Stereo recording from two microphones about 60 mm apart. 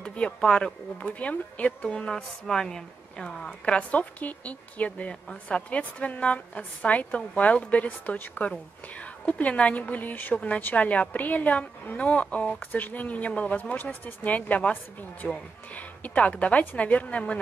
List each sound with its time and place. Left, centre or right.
0.0 s a woman's voice: centre
1.9 s a woman's voice: centre
3.7 s a woman's voice: left